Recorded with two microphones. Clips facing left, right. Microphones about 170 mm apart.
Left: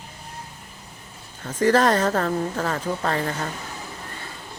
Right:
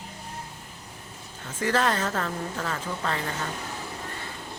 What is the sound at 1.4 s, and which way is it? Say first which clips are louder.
A woman's voice: left 7 dB; 40° left (ahead or behind).